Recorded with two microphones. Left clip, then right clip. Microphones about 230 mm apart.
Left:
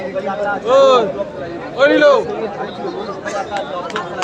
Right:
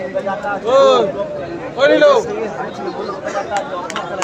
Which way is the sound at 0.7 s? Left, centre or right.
Left.